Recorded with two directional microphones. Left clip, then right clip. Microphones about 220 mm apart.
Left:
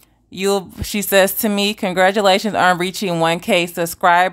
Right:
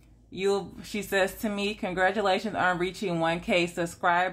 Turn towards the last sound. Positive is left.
turn(degrees=45)  # may be behind; listen again after turning